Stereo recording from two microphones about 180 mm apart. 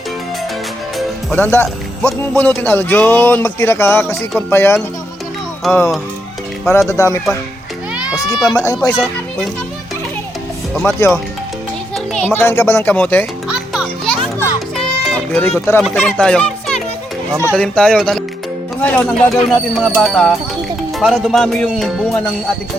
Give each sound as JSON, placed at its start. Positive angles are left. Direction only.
{"t": 0.9, "sound": "speech", "side_deg": 10}
{"t": 6.7, "sound": "a child's voice", "side_deg": 15}
{"t": 10.8, "sound": "speech", "side_deg": 15}
{"t": 13.5, "sound": "music", "side_deg": -5}
{"t": 16.0, "sound": "speech", "side_deg": 5}
{"t": 17.5, "sound": "music", "side_deg": 5}
{"t": 18.8, "sound": "speech", "side_deg": 10}
{"t": 19.5, "sound": "music", "side_deg": 0}